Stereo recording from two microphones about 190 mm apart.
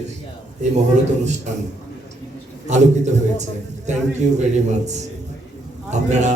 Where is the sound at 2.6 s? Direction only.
40° right (ahead or behind).